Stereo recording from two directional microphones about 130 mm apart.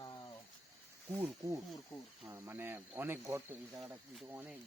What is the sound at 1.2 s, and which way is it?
Speech, 25° right (ahead or behind).